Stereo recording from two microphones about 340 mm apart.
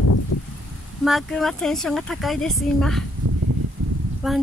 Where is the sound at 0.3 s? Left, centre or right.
Left.